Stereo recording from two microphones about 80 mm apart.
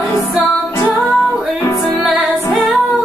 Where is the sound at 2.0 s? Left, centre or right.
Centre.